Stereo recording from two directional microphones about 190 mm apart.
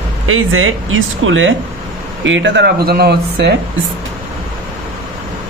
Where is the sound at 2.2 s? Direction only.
75° right (ahead or behind); by 3.5 s 60° right (ahead or behind).